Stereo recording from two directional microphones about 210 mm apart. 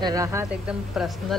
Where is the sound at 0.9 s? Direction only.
5° right (ahead or behind).